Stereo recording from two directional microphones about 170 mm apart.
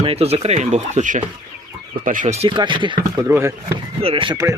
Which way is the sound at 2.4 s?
30° right (ahead or behind).